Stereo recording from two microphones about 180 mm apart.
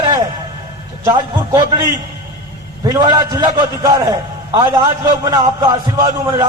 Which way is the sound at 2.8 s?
20° right (ahead or behind).